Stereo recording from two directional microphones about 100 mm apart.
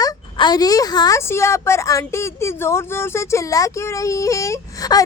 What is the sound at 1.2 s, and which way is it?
A woman's voice, 25° left (ahead or behind).